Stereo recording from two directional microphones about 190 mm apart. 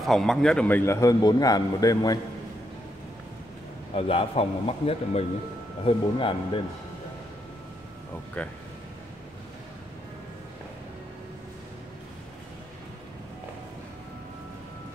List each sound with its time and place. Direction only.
0.0 s a man's voice: centre (ahead or behind); by 2.1 s 20° left (ahead or behind)
3.9 s a man's voice: 30° left (ahead or behind)
8.4 s a man's voice: 5° left (ahead or behind)